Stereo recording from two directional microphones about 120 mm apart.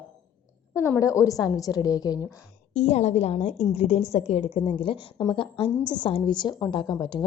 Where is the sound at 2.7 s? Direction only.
65° left (ahead or behind).